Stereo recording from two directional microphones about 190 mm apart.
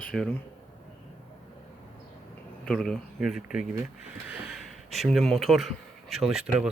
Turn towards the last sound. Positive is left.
turn(degrees=0)  # may be behind; listen again after turning